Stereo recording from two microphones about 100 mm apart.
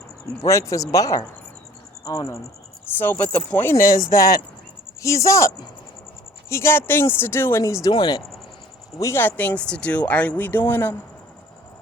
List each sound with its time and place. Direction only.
0.3 s speech: 30° left (ahead or behind)
2.8 s speech: 20° left (ahead or behind)
7.6 s speech: 35° left (ahead or behind)
7.9 s speech: 45° left (ahead or behind)
9.0 s speech: 25° left (ahead or behind)